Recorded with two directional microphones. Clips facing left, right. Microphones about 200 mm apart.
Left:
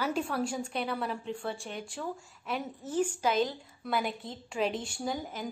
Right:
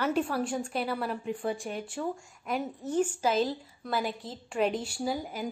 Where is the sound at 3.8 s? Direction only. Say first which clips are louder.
Even; centre (ahead or behind).